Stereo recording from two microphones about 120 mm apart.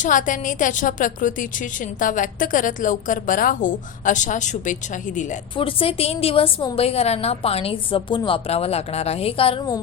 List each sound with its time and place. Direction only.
0.0 s a woman's voice: 90° left
5.5 s a woman's voice: 50° left (ahead or behind)
8.4 s a woman's voice: 60° left (ahead or behind)